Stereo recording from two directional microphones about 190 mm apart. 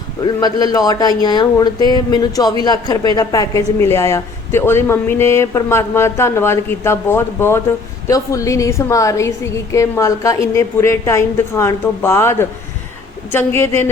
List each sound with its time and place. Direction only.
0.3 s speech: 20° left (ahead or behind)